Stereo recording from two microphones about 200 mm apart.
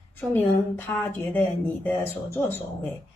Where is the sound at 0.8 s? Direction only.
10° left (ahead or behind).